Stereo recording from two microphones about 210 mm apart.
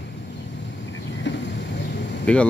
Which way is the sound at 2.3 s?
5° left (ahead or behind).